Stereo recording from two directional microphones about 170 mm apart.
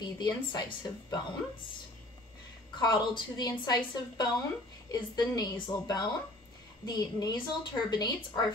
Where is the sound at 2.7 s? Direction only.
25° left (ahead or behind).